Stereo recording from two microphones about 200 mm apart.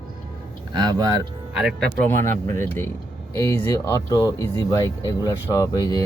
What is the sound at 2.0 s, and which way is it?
Speech, 10° left (ahead or behind).